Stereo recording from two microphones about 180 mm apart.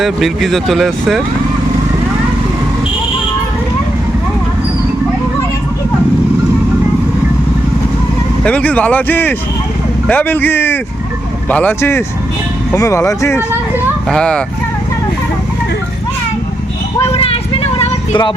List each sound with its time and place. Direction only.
0.0 s speech: centre (ahead or behind)
8.4 s speech: 10° left (ahead or behind)
17.1 s a sound: 30° left (ahead or behind)